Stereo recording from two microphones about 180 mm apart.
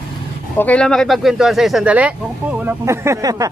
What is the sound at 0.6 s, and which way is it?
Speech, 5° left (ahead or behind).